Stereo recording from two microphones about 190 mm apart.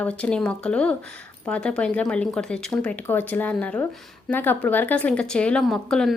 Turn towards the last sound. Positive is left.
turn(degrees=0)  # may be behind; listen again after turning